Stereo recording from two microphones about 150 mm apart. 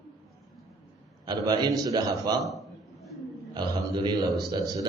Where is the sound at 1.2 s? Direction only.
30° right (ahead or behind).